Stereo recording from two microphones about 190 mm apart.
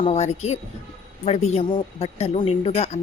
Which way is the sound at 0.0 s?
35° left (ahead or behind).